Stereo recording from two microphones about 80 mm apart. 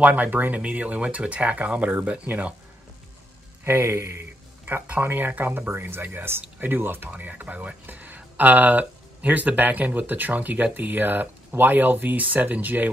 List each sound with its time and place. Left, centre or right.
0.0 s speech: centre
3.6 s a sound: right
5.0 s speech: right